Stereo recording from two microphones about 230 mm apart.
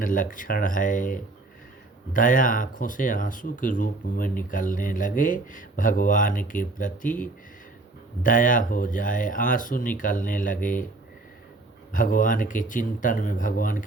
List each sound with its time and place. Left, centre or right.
0.0 s speech: left
11.9 s speech: left